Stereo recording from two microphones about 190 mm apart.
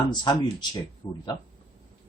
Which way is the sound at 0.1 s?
20° left (ahead or behind).